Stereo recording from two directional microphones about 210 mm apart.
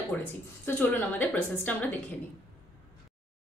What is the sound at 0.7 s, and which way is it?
A woman's voice, 10° left (ahead or behind).